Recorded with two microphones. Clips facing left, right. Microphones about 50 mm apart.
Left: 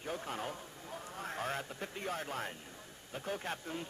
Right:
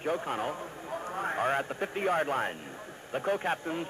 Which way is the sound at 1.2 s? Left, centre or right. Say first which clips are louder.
Right 9 dB; right.